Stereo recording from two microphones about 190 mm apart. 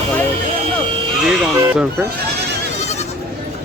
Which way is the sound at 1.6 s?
10° right (ahead or behind).